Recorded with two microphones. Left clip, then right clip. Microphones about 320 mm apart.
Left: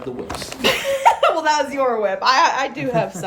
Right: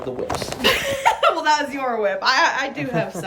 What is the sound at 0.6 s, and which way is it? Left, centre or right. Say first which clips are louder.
Speech: left 3 dB; centre.